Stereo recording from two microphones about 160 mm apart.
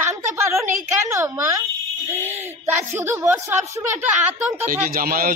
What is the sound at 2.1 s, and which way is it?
A man's voice, 15° right (ahead or behind).